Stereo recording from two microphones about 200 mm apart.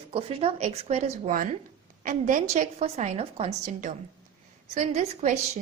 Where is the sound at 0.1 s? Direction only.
30° right (ahead or behind).